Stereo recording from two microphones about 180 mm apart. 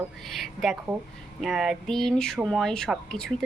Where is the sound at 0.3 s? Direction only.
Centre (ahead or behind).